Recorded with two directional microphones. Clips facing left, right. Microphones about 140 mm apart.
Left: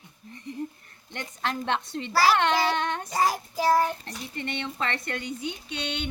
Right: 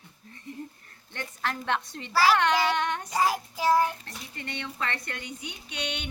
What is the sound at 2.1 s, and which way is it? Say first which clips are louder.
Child singing: even; 40° left (ahead or behind).